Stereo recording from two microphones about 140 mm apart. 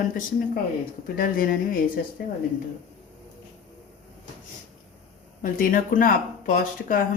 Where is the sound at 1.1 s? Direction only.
90° left.